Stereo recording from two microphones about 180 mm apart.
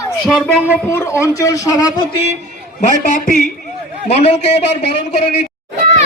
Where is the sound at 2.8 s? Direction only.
50° left (ahead or behind).